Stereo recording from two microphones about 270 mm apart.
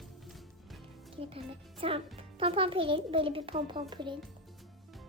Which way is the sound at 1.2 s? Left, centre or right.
Centre.